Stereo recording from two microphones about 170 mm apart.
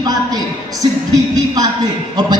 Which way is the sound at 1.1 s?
20° right (ahead or behind).